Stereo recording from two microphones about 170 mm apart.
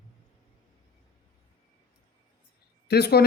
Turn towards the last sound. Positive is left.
turn(degrees=70)  # may be behind; listen again after turning